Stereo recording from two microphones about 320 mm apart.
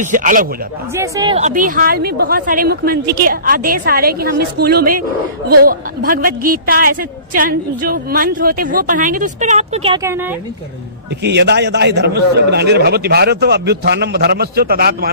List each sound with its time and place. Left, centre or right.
0.0 s a woman's voice: right
0.9 s a woman's voice: centre
11.2 s a man's voice: right